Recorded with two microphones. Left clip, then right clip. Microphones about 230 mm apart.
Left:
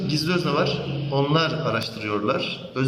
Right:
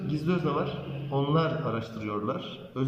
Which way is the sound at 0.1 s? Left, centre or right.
Left.